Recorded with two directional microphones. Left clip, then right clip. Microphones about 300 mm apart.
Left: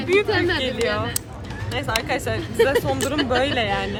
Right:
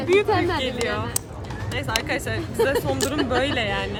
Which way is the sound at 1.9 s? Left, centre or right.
Centre.